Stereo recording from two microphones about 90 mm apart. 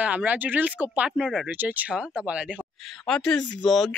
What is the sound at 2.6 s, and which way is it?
Speech, 10° left (ahead or behind).